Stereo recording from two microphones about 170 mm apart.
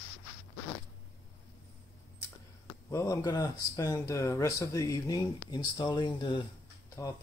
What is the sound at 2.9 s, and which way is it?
Speech, 20° left (ahead or behind).